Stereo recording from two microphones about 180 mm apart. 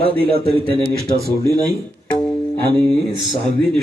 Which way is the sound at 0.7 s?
30° right (ahead or behind).